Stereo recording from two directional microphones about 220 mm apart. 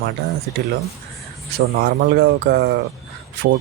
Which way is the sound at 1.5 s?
50° right (ahead or behind).